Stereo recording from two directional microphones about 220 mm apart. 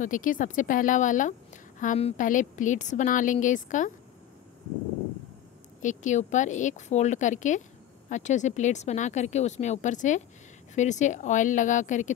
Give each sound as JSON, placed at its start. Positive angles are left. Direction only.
{"t": 0.0, "sound": "a woman's voice", "side_deg": 35}
{"t": 5.8, "sound": "a woman's voice", "side_deg": 35}